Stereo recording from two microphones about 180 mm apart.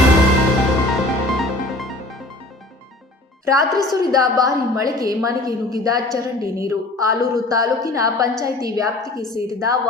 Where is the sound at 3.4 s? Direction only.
20° right (ahead or behind).